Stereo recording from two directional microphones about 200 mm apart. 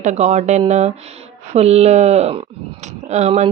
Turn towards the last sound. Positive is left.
turn(degrees=-35)  # may be behind; listen again after turning